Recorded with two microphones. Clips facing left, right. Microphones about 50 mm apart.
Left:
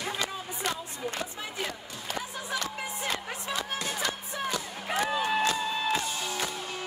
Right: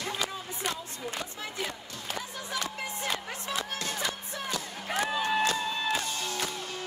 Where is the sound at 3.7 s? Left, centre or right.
Centre.